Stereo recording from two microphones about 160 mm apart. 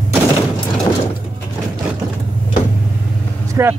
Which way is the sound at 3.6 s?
15° right (ahead or behind).